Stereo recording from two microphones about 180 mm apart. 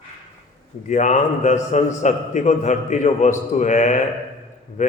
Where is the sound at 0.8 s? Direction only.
40° left (ahead or behind).